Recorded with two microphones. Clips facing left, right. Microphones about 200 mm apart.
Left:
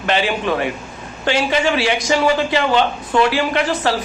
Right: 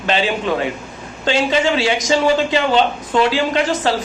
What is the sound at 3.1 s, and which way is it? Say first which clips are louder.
Speech: even; 20° right (ahead or behind).